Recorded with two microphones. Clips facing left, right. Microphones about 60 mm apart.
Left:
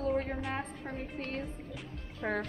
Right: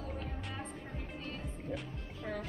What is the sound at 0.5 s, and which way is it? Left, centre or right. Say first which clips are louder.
Music: left 6 dB; left.